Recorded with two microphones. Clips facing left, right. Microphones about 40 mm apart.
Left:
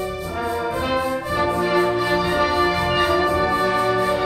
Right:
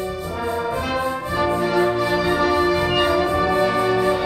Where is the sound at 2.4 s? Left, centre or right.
Centre.